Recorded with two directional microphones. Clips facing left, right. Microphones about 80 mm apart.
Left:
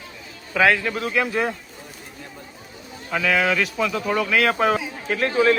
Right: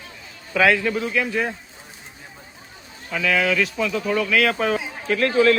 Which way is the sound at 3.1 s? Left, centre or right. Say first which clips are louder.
Even; centre.